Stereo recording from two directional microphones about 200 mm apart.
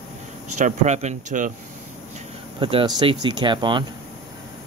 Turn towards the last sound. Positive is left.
turn(degrees=-25)  # may be behind; listen again after turning